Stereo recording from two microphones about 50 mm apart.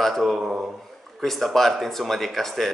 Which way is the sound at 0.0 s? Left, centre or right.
Centre.